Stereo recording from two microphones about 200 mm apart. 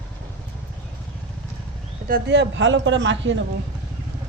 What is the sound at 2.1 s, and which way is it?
Speech, 60° right (ahead or behind).